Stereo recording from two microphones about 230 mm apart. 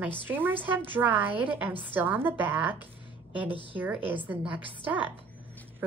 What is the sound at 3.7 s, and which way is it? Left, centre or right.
A woman's voice, centre.